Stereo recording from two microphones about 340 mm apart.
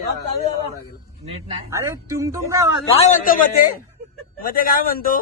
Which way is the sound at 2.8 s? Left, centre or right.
Centre.